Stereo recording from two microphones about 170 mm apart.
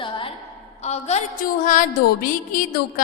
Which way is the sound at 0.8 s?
40° left (ahead or behind).